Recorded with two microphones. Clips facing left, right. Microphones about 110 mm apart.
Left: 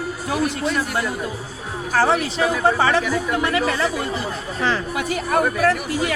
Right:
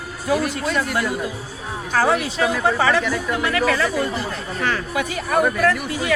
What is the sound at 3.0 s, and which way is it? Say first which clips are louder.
Speech: left 1 dB; 5° left (ahead or behind).